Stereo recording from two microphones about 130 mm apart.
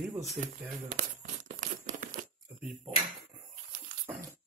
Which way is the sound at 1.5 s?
75° right (ahead or behind).